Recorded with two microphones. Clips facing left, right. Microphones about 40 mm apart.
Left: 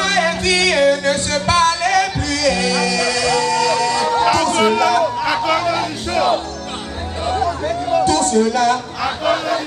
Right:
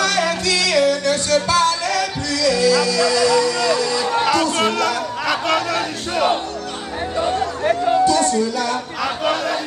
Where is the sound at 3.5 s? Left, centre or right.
Right.